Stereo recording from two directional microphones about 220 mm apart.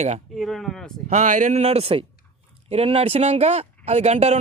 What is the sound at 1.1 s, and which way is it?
A man's voice, 35° right (ahead or behind).